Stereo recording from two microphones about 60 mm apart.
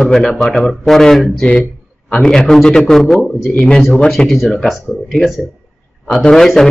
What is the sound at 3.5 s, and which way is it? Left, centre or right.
Speech, left.